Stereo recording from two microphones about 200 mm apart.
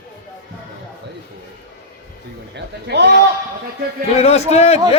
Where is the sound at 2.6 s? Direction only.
60° right (ahead or behind).